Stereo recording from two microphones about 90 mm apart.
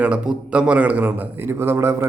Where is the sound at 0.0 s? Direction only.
10° right (ahead or behind).